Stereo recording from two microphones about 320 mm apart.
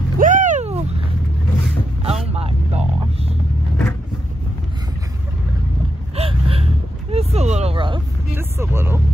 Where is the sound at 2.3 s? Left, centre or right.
Centre.